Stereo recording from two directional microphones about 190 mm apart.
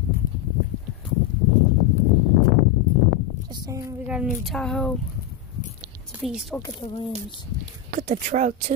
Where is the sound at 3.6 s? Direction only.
15° right (ahead or behind).